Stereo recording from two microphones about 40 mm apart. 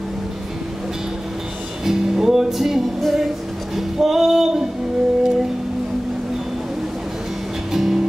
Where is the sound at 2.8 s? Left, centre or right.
Centre.